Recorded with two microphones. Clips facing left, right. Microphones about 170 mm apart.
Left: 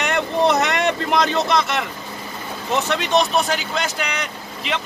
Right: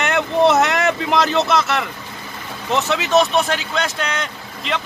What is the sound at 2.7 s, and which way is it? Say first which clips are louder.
Speech: right 2 dB; centre (ahead or behind).